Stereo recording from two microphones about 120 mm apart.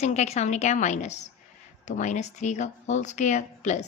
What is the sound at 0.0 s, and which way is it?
A woman's voice, 70° left (ahead or behind).